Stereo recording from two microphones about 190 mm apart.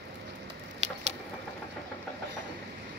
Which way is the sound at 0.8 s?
35° right (ahead or behind).